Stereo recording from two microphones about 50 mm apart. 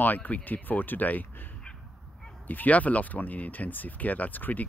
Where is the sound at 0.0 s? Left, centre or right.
Left.